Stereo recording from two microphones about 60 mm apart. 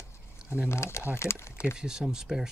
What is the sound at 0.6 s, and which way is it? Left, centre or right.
Speech, left.